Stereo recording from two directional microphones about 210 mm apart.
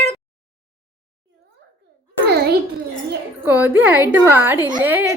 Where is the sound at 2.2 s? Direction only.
50° right (ahead or behind).